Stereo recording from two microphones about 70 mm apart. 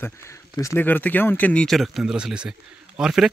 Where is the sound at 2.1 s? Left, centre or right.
Centre.